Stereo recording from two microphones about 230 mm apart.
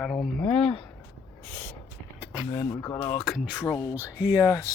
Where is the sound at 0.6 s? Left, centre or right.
Left.